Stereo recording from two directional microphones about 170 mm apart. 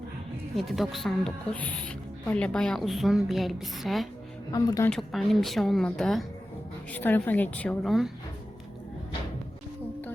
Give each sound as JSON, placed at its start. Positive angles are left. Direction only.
{"t": 0.5, "sound": "a woman's voice", "side_deg": 0}
{"t": 4.5, "sound": "speech", "side_deg": 20}
{"t": 4.9, "sound": "a woman's voice", "side_deg": 0}